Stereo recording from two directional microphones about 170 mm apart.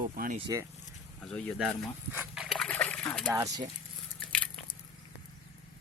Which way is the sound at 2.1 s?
10° right (ahead or behind).